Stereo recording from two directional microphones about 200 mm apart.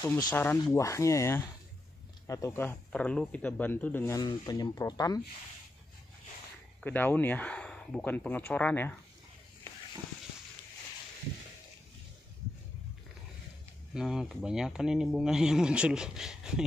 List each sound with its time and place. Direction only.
0.0 s speech: 15° left (ahead or behind)
6.8 s speech: 10° left (ahead or behind)
13.9 s speech: centre (ahead or behind)